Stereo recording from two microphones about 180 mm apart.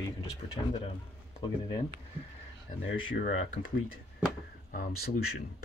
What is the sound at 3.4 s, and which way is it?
Speech, 50° left (ahead or behind).